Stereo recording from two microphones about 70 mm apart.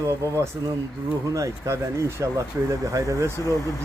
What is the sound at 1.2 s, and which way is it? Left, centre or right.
Speech, right.